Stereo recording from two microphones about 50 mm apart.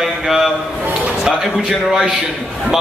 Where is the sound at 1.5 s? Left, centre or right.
Centre.